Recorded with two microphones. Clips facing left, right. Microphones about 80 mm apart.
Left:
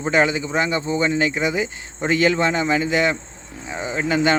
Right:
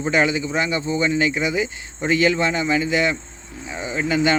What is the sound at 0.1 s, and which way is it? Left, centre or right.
Speech, left.